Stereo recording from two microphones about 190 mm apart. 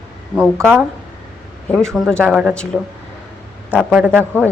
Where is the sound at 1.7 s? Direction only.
Centre (ahead or behind).